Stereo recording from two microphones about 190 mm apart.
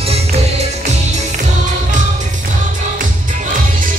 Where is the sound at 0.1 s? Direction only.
35° right (ahead or behind).